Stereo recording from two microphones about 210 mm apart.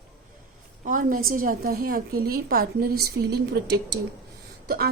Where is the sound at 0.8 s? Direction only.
40° right (ahead or behind).